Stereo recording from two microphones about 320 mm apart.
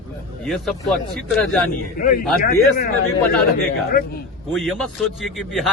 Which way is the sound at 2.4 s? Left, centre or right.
Left.